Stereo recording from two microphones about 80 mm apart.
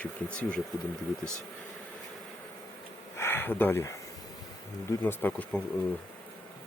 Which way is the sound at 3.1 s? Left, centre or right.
Left.